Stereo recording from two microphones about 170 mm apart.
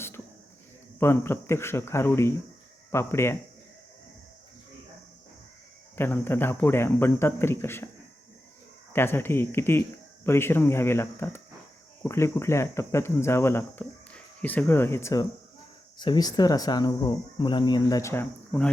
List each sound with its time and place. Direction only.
0.9 s speech: 15° left (ahead or behind)
6.0 s speech: 15° left (ahead or behind)
8.9 s speech: 15° left (ahead or behind)